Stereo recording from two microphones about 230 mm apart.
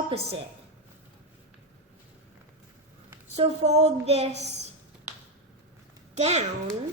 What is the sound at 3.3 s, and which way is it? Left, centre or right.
Speech, right.